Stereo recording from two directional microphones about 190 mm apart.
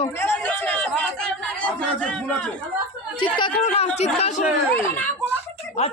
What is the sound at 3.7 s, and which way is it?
Speech, 35° left (ahead or behind).